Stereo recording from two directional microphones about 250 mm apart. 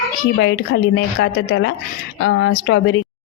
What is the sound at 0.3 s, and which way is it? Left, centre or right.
A woman's voice, left.